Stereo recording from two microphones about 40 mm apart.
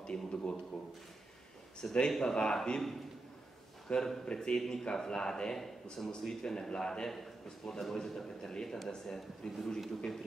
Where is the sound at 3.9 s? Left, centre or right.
Left.